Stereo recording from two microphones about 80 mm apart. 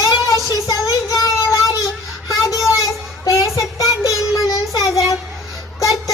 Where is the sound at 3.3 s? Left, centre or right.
Left.